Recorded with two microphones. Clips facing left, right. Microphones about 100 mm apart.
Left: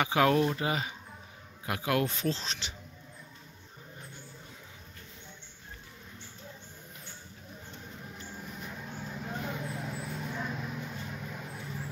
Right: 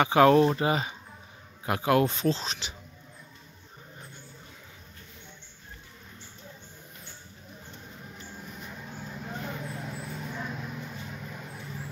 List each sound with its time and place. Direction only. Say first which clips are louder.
0.0 s speech: right 6 dB; 40° right (ahead or behind); by 2.7 s 15° right (ahead or behind)
7.8 s vehicle: even; centre (ahead or behind)